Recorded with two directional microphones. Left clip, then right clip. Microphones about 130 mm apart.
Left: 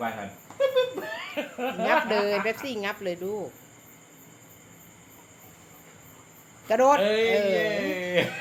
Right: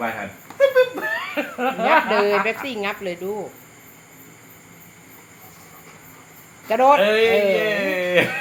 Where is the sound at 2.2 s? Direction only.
45° left (ahead or behind).